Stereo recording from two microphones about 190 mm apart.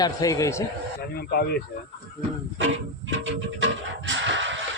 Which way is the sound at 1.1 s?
55° left (ahead or behind).